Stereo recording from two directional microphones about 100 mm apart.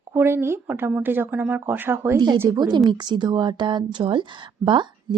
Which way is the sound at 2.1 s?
45° right (ahead or behind).